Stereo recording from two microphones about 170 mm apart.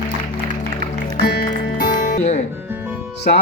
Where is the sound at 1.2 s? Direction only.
70° left (ahead or behind); by 2.5 s 45° left (ahead or behind).